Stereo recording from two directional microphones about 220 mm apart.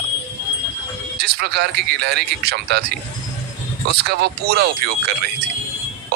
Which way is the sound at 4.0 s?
45° right (ahead or behind).